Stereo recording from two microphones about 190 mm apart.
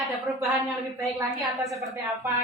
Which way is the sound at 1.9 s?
15° right (ahead or behind).